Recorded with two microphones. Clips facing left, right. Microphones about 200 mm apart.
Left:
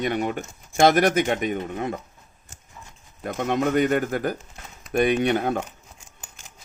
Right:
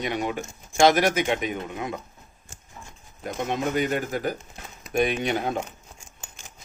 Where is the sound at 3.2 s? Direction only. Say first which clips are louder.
Left 4 dB; 55° left (ahead or behind).